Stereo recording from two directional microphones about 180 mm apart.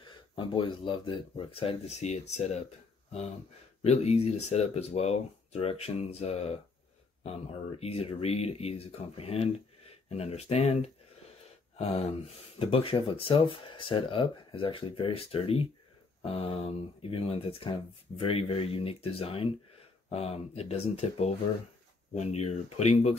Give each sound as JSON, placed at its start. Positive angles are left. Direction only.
{"t": 0.0, "sound": "speech", "side_deg": 25}
{"t": 3.8, "sound": "speech", "side_deg": 35}